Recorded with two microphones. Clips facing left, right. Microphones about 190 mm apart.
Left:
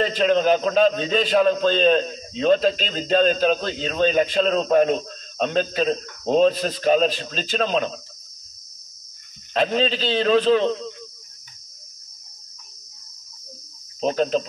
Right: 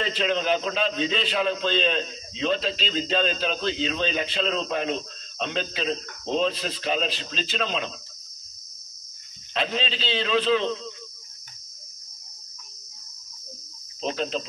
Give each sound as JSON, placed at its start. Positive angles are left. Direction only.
{"t": 0.0, "sound": "a man's voice", "side_deg": 45}
{"t": 9.5, "sound": "a man's voice", "side_deg": 45}
{"t": 14.0, "sound": "a man's voice", "side_deg": 45}